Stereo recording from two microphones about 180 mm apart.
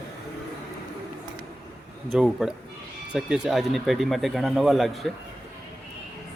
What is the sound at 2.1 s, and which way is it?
Speech, centre (ahead or behind).